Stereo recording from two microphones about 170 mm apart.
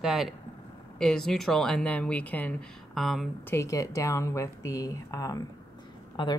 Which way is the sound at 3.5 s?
15° left (ahead or behind).